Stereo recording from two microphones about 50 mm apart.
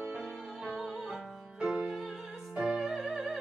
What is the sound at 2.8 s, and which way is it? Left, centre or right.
Music, centre.